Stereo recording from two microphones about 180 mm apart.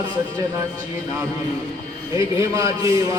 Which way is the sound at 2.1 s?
20° right (ahead or behind).